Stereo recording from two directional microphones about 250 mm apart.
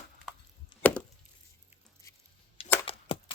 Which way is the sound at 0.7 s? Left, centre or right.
Centre.